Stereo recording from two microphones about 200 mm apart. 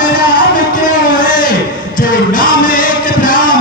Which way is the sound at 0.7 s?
45° left (ahead or behind).